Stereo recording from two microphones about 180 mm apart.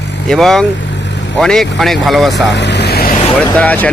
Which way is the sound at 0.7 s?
75° left (ahead or behind).